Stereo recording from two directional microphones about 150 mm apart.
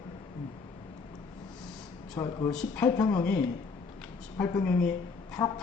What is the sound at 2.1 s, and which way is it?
Speech, 25° left (ahead or behind).